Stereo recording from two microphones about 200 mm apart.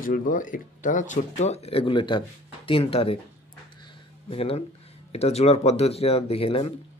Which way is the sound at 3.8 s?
30° left (ahead or behind).